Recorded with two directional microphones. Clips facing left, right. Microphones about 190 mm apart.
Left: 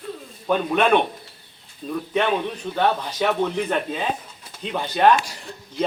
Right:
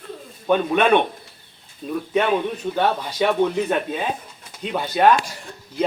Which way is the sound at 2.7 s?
5° right (ahead or behind).